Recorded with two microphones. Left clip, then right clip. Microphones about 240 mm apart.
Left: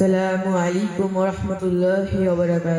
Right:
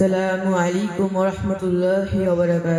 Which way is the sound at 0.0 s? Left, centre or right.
Right.